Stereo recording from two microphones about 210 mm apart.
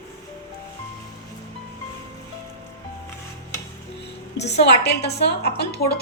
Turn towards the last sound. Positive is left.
turn(degrees=50)  # may be behind; listen again after turning